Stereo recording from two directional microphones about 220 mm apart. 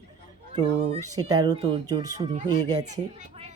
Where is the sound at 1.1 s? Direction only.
15° right (ahead or behind).